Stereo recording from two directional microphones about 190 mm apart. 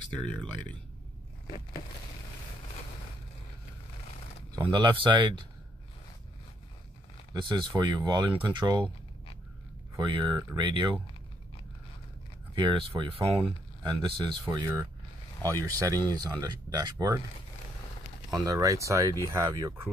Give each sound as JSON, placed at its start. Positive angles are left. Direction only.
{"t": 0.2, "sound": "speech", "side_deg": 5}
{"t": 4.6, "sound": "speech", "side_deg": -25}
{"t": 7.3, "sound": "speech", "side_deg": -25}
{"t": 9.9, "sound": "speech", "side_deg": -25}
{"t": 12.5, "sound": "speech", "side_deg": -25}
{"t": 18.3, "sound": "speech", "side_deg": -20}